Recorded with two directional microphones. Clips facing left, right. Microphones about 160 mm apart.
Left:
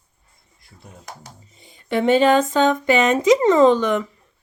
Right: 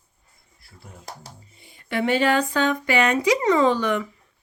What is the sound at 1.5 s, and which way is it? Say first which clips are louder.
A woman's voice: left 4 dB; 20° left (ahead or behind).